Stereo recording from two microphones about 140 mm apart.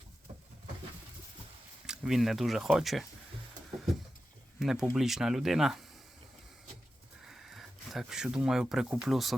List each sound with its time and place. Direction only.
1.9 s speech: 5° right (ahead or behind)
4.6 s speech: 5° right (ahead or behind)
7.3 s speech: centre (ahead or behind)